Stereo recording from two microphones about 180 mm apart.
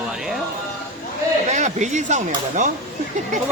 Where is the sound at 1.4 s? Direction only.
40° right (ahead or behind).